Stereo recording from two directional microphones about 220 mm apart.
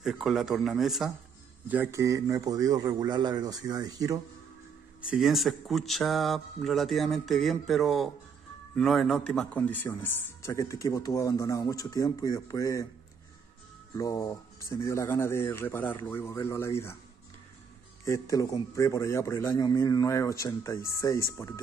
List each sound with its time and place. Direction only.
0.0 s a man's voice: centre (ahead or behind)
5.1 s a man's voice: centre (ahead or behind); by 12.8 s 15° left (ahead or behind)
13.9 s a man's voice: 15° left (ahead or behind)
18.0 s a man's voice: 15° left (ahead or behind)